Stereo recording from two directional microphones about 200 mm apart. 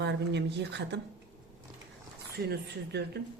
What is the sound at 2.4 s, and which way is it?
Speech, 55° right (ahead or behind).